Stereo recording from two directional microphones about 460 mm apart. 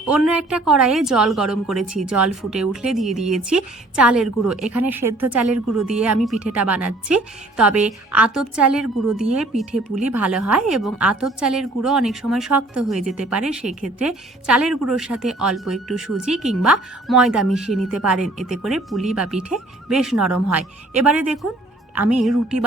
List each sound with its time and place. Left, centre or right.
0.0 s a woman's voice: centre
5.0 s a woman's voice: right
5.3 s a woman's voice: centre